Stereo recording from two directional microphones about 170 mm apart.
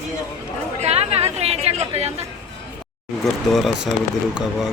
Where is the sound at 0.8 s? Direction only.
40° right (ahead or behind).